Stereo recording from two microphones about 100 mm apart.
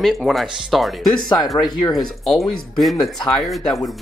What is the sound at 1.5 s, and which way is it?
Speech, 40° left (ahead or behind).